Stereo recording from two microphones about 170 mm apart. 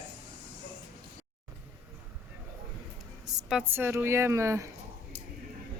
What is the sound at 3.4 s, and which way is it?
A woman's voice, 10° right (ahead or behind).